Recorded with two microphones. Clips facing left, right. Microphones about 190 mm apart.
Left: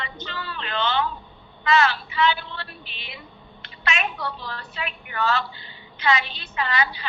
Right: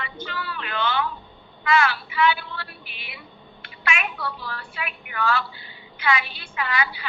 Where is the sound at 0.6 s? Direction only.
20° left (ahead or behind).